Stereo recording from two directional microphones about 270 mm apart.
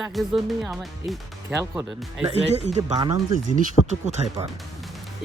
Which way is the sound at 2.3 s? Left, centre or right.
Right.